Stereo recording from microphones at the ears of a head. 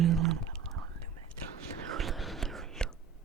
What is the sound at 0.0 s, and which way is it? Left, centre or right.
Whispering, right.